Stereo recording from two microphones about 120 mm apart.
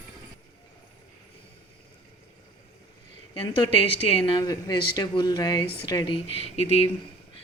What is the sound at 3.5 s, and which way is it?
Speech, 45° left (ahead or behind).